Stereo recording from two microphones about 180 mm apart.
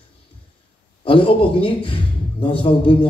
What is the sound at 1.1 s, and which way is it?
A man's voice, 30° left (ahead or behind).